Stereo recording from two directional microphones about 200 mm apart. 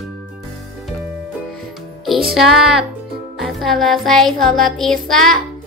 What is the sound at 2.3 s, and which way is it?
Music, centre (ahead or behind).